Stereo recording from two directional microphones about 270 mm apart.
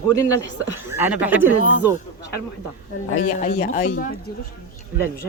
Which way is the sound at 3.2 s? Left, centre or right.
Left.